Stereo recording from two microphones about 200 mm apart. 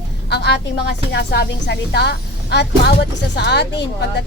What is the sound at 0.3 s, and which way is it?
A woman's voice, 55° left (ahead or behind).